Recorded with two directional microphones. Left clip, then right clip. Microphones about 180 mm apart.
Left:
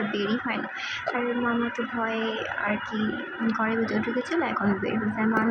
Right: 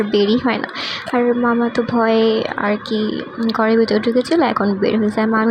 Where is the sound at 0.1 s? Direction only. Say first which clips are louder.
Right 12 dB; 55° right (ahead or behind).